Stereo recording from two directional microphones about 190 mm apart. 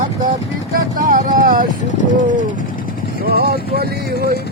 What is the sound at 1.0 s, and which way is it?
Speech, 45° right (ahead or behind).